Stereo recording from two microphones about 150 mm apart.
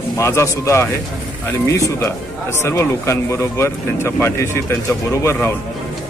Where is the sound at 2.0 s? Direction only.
20° left (ahead or behind).